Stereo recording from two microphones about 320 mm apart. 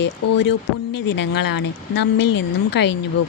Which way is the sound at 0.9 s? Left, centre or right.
Left.